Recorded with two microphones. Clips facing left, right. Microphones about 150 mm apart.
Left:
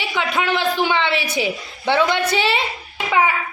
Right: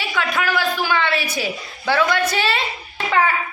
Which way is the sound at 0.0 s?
20° left (ahead or behind).